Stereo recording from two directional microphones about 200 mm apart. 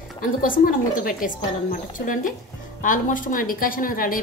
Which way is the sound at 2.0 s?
50° left (ahead or behind).